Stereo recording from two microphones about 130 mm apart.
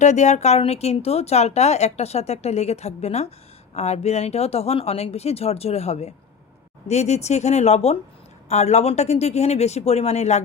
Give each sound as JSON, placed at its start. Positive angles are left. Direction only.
{"t": 0.0, "sound": "speech", "side_deg": 65}